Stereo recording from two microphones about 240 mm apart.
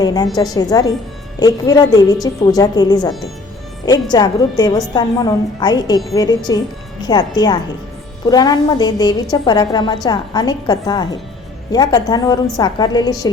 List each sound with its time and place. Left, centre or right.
0.0 s a woman's voice: centre